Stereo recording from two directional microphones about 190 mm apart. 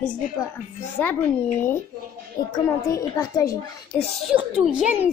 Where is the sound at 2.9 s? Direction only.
20° left (ahead or behind).